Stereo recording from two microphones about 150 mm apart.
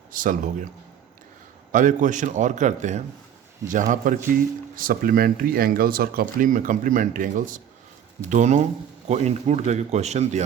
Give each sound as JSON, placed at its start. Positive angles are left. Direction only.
{"t": 0.1, "sound": "a man's voice", "side_deg": -65}
{"t": 1.7, "sound": "a man's voice", "side_deg": -60}